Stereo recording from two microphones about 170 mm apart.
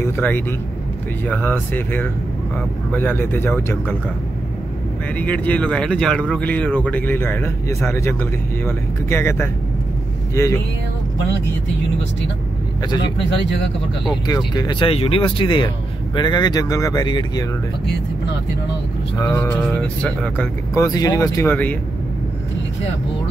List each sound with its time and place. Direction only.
0.0 s speech: 10° left (ahead or behind)
5.2 s speech: 10° left (ahead or behind)
14.2 s speech: 25° left (ahead or behind)
19.1 s speech: 15° left (ahead or behind)
20.7 s speech: 20° left (ahead or behind)